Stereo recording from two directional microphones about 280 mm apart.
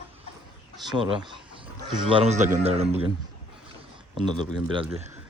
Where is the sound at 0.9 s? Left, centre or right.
Centre.